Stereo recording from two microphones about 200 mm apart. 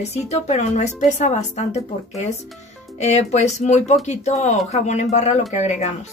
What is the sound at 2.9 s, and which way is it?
A woman's voice, 35° left (ahead or behind).